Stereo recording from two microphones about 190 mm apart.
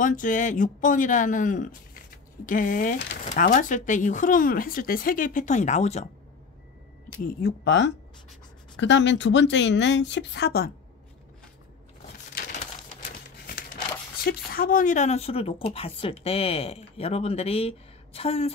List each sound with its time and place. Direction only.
0.0 s speech: 45° left (ahead or behind)
7.1 s speech: 50° left (ahead or behind)
7.6 s speech: 70° left (ahead or behind)
14.2 s a woman's voice: 50° left (ahead or behind); by 18.5 s 30° left (ahead or behind)